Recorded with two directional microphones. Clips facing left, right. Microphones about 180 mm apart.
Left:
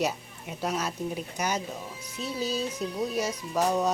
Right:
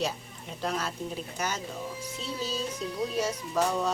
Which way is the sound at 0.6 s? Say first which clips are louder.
Left 2 dB; 10° left (ahead or behind).